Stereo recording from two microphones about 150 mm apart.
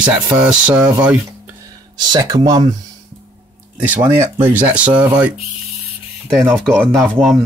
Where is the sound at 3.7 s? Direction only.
15° right (ahead or behind).